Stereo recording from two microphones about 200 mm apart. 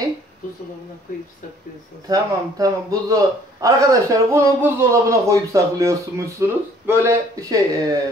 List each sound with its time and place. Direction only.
2.0 s a man's voice: 15° right (ahead or behind)